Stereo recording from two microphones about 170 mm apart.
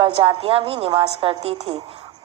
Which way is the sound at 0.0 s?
30° right (ahead or behind).